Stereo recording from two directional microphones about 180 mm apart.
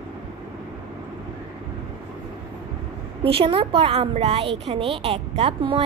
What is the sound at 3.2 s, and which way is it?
A woman's voice, 30° right (ahead or behind).